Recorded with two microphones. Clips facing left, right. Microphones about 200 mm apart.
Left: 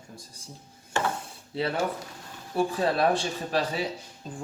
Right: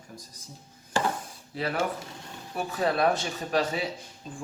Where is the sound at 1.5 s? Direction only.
30° left (ahead or behind).